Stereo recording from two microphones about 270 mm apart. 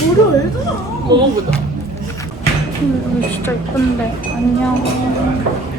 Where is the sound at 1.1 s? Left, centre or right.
Centre.